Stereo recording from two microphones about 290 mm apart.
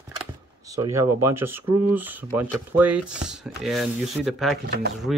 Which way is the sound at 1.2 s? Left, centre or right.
Centre.